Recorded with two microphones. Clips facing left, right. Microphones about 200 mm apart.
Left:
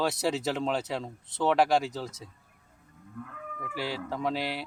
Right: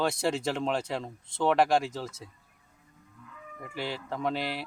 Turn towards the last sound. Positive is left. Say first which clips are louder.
# even
turn(degrees=0)  # may be behind; listen again after turning